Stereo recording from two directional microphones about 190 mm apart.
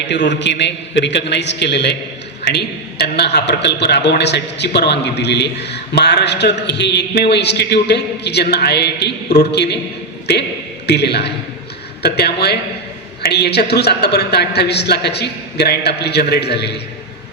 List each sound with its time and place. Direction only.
0.1 s a man's voice: 70° left (ahead or behind)
10.8 s a man's voice: 60° left (ahead or behind)